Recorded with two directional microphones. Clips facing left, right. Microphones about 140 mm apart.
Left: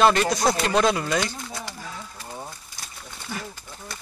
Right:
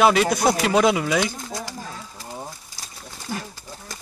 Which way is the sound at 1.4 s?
40° right (ahead or behind).